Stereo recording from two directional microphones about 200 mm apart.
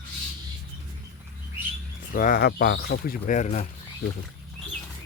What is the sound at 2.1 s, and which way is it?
Speech, 40° left (ahead or behind).